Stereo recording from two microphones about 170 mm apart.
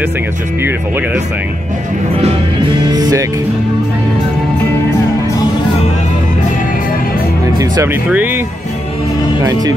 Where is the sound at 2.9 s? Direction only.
20° right (ahead or behind).